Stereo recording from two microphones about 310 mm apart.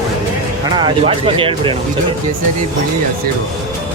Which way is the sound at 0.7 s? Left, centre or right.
Centre.